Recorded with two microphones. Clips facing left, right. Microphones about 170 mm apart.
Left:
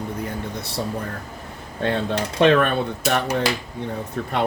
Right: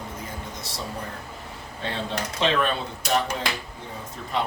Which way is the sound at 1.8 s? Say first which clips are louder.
Left 7 dB; 55° left (ahead or behind).